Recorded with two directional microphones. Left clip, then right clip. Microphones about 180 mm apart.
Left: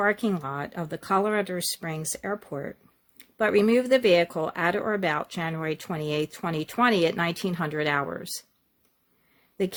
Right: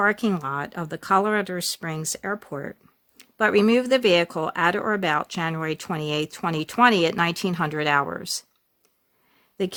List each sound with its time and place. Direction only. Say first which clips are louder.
0.0 s speech: right 3 dB; 30° right (ahead or behind)
9.6 s speech: right 1 dB; 25° right (ahead or behind)